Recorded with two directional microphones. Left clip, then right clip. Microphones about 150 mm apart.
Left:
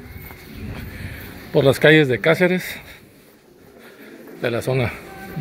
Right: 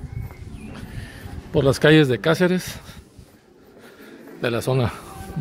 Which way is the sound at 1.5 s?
20° right (ahead or behind).